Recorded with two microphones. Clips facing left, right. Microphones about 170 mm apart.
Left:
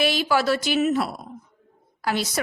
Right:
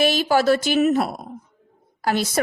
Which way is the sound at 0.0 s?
45° right (ahead or behind).